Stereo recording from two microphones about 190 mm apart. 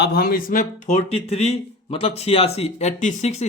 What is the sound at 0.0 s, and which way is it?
Speech, 55° left (ahead or behind).